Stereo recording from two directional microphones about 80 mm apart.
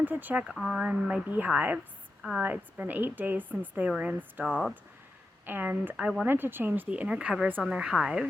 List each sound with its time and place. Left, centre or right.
0.0 s a woman's voice: right
0.4 s a woman's voice: centre
5.5 s a woman's voice: right; by 8.3 s centre